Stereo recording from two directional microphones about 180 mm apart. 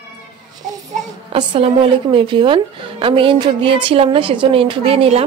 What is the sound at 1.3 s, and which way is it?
A woman's voice, 30° right (ahead or behind).